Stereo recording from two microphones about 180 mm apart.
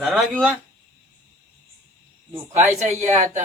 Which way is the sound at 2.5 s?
40° right (ahead or behind).